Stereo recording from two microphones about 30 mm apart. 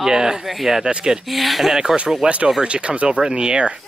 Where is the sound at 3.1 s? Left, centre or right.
Right.